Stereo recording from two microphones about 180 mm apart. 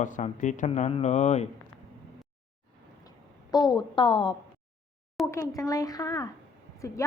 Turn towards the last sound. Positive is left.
turn(degrees=15)  # may be behind; listen again after turning